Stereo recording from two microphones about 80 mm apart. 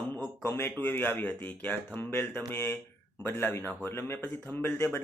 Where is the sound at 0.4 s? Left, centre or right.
Left.